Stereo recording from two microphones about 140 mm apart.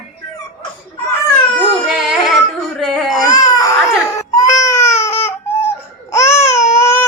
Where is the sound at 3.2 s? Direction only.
25° left (ahead or behind).